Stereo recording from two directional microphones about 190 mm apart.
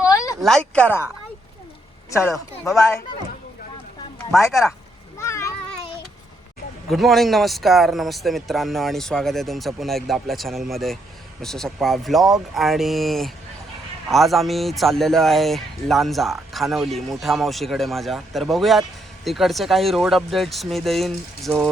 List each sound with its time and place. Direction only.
0.0 s a sound: 15° left (ahead or behind)
0.4 s speech: 5° left (ahead or behind)
2.0 s speech: 15° left (ahead or behind)
4.4 s speech: 15° left (ahead or behind)
5.1 s a sound: 15° left (ahead or behind)
6.8 s speech: centre (ahead or behind)